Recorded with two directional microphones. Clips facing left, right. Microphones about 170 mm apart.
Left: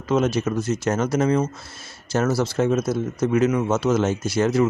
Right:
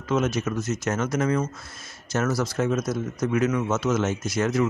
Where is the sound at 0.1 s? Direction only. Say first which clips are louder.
Left 4 dB; 30° left (ahead or behind).